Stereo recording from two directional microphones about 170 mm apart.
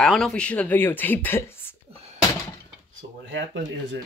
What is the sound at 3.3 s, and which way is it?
Speech, 90° right.